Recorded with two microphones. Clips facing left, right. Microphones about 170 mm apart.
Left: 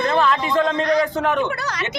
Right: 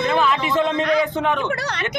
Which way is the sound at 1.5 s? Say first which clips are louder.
Right 1 dB; 30° right (ahead or behind).